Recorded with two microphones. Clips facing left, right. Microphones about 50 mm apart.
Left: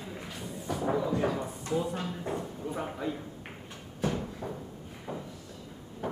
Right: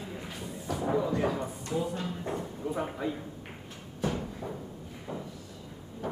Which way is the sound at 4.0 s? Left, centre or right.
Centre.